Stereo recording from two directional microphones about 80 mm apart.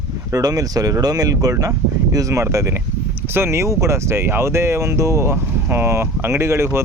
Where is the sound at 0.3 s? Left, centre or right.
Right.